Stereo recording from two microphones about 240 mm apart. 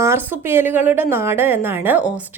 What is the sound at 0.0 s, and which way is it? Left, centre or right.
A woman's voice, centre.